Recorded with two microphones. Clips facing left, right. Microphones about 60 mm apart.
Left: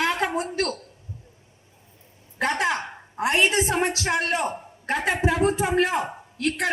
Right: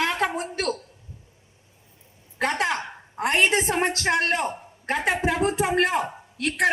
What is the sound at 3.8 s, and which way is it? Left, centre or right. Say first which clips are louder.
Speech: right 1 dB; right.